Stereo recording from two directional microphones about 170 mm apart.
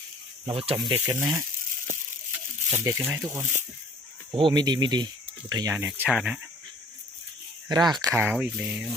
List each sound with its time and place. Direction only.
0.4 s speech: 35° right (ahead or behind)
0.9 s speech: 15° right (ahead or behind)
2.7 s speech: 15° right (ahead or behind)
4.4 s speech: 25° right (ahead or behind); by 6.4 s 5° right (ahead or behind)
7.7 s speech: 25° right (ahead or behind)
8.0 s speech: 10° right (ahead or behind)